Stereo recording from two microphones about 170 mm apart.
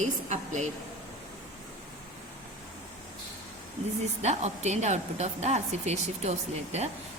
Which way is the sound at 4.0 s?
40° right (ahead or behind).